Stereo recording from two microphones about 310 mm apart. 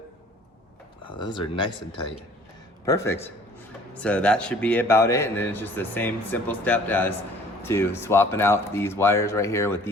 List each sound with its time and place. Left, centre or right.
1.1 s a man's voice: centre